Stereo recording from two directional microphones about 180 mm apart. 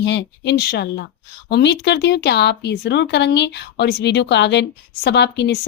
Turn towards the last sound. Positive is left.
turn(degrees=70)  # may be behind; listen again after turning